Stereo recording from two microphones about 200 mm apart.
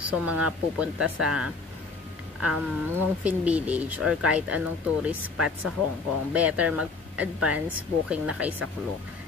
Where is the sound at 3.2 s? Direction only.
5° right (ahead or behind).